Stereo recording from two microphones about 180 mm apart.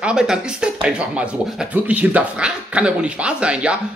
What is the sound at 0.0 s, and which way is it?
Speech, 5° right (ahead or behind).